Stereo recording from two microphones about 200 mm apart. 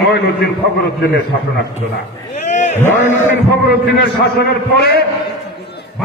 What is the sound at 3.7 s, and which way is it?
A man's voice, 55° left (ahead or behind).